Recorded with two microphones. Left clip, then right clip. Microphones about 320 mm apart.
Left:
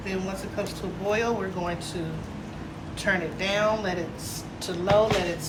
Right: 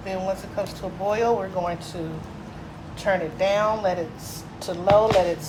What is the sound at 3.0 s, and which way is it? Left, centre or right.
Speech, right.